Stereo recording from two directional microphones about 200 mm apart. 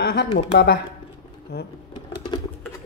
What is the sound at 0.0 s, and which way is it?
Speech, 50° left (ahead or behind).